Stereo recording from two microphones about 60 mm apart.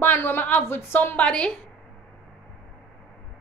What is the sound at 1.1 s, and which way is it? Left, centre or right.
Speech, centre.